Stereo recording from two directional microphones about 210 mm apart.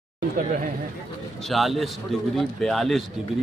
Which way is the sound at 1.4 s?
Centre (ahead or behind).